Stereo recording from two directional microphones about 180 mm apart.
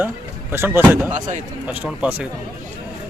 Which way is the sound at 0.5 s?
15° right (ahead or behind).